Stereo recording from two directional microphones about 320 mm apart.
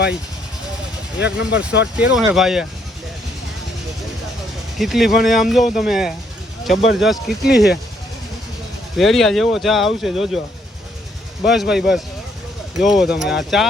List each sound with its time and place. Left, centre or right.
1.2 s speech: left
2.0 s speech: centre
4.8 s speech: centre
9.0 s speech: centre
11.4 s speech: centre